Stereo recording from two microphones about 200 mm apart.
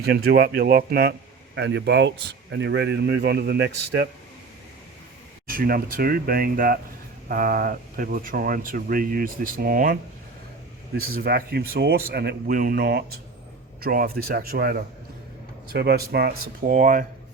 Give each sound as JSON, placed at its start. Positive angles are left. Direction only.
{"t": 0.0, "sound": "speech", "side_deg": -55}
{"t": 5.5, "sound": "speech", "side_deg": -45}